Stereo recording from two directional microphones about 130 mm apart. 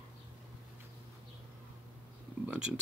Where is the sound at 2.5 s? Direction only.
5° right (ahead or behind).